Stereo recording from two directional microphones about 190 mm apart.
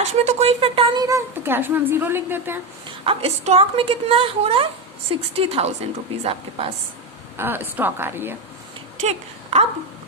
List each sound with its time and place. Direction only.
0.0 s a woman's voice: 35° right (ahead or behind); by 2.6 s 10° right (ahead or behind)
3.1 s speech: 30° right (ahead or behind)
7.3 s a woman's voice: 10° right (ahead or behind)
9.0 s speech: 35° right (ahead or behind)